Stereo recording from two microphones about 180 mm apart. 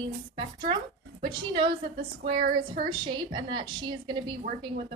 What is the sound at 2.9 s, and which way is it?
A woman's voice, 25° right (ahead or behind).